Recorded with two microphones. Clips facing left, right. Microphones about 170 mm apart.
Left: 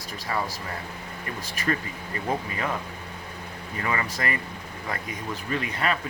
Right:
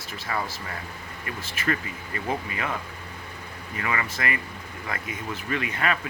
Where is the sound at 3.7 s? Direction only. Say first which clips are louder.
Left 1 dB; 35° left (ahead or behind).